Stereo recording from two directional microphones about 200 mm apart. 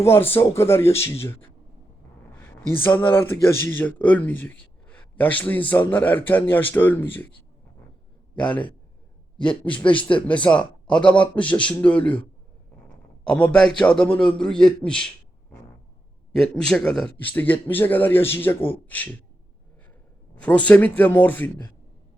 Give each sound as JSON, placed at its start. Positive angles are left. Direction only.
{"t": 0.0, "sound": "a man's voice", "side_deg": 10}
{"t": 2.4, "sound": "a man's voice", "side_deg": 10}
{"t": 8.4, "sound": "a man's voice", "side_deg": 5}
{"t": 9.7, "sound": "speech", "side_deg": 25}
{"t": 10.2, "sound": "a man's voice", "side_deg": 5}
{"t": 13.2, "sound": "a man's voice", "side_deg": 5}
{"t": 16.3, "sound": "a man's voice", "side_deg": 5}
{"t": 20.3, "sound": "a man's voice", "side_deg": 5}